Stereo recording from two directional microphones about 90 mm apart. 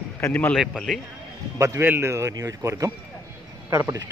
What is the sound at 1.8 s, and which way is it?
A man's voice, 25° right (ahead or behind).